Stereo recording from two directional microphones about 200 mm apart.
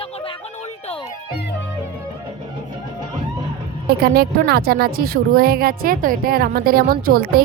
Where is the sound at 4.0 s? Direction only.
50° right (ahead or behind).